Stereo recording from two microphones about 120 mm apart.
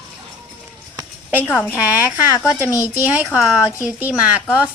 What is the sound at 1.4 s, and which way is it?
Speech, 15° left (ahead or behind).